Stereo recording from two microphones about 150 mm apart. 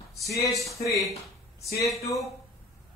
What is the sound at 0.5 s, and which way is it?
Speech, centre (ahead or behind).